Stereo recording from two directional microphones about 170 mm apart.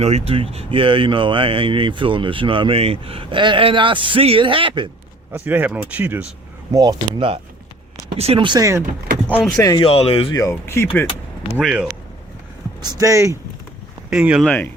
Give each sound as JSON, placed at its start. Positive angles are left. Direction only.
{"t": 0.0, "sound": "speech", "side_deg": -35}
{"t": 5.3, "sound": "speech", "side_deg": -10}
{"t": 6.7, "sound": "speech", "side_deg": -25}
{"t": 9.2, "sound": "speech", "side_deg": 5}
{"t": 9.6, "sound": "speech", "side_deg": 20}
{"t": 9.8, "sound": "speech", "side_deg": 35}
{"t": 10.3, "sound": "speech", "side_deg": 15}
{"t": 11.5, "sound": "speech", "side_deg": -5}
{"t": 12.8, "sound": "speech", "side_deg": -20}
{"t": 14.1, "sound": "speech", "side_deg": -5}
{"t": 14.4, "sound": "speech", "side_deg": 10}